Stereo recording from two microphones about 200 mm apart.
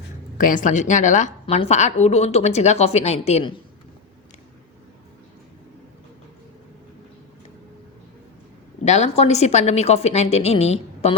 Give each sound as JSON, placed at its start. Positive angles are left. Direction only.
{"t": 0.3, "sound": "a woman's voice", "side_deg": 40}
{"t": 8.8, "sound": "a woman's voice", "side_deg": 35}